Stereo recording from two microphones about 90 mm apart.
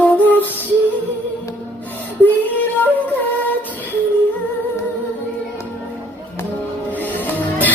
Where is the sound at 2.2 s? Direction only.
20° left (ahead or behind).